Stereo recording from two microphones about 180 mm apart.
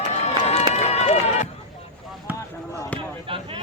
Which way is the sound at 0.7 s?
35° left (ahead or behind).